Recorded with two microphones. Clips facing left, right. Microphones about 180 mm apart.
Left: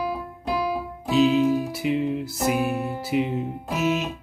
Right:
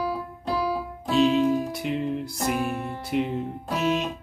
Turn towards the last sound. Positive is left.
turn(degrees=5)  # may be behind; listen again after turning